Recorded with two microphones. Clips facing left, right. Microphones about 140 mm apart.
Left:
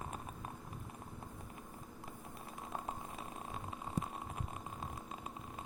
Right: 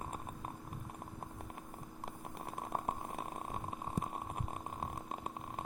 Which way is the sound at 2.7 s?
50° right (ahead or behind).